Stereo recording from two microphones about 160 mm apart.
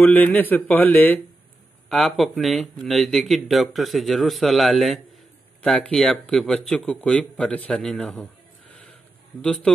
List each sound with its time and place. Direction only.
0.0 s speech: 10° left (ahead or behind)